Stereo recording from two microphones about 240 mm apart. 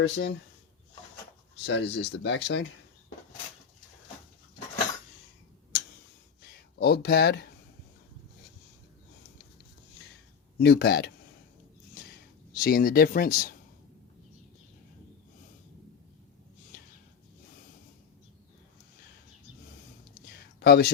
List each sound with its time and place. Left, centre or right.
0.0 s speech: left
1.6 s speech: left
6.7 s speech: left
10.6 s speech: left
12.5 s speech: left
20.6 s speech: left